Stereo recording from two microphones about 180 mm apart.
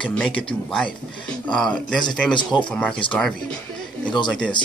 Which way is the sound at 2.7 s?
5° left (ahead or behind).